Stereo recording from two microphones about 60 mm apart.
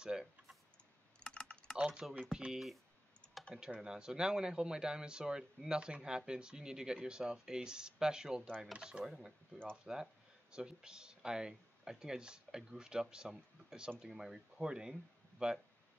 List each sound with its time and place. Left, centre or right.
0.0 s typing: centre
1.2 s typing: centre
2.0 s speech: centre
3.7 s speech: centre
9.0 s speech: centre